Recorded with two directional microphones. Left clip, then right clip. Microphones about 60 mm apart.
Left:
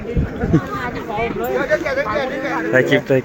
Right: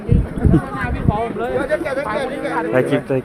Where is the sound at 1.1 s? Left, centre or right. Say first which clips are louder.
Right 2 dB; left.